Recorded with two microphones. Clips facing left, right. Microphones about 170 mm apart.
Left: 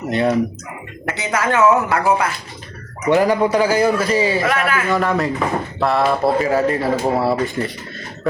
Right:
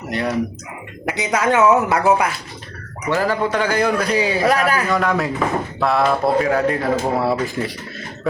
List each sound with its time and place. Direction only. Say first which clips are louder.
0.1 s speech: left 5 dB; 25° left (ahead or behind)
1.0 s speech: right 2 dB; 15° right (ahead or behind)
3.1 s a man's voice: left 5 dB; 15° left (ahead or behind); by 4.4 s centre (ahead or behind)
4.4 s speech: right 2 dB; 40° right (ahead or behind)
4.9 s speech: left 1 dB; centre (ahead or behind)